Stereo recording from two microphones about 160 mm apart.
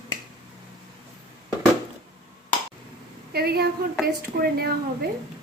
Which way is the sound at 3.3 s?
75° right (ahead or behind).